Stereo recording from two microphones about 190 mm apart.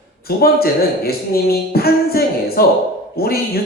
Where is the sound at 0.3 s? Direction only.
55° left (ahead or behind).